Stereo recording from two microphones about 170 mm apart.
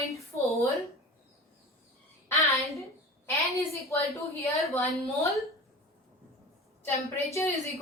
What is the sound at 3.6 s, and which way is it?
A woman's voice, 20° left (ahead or behind).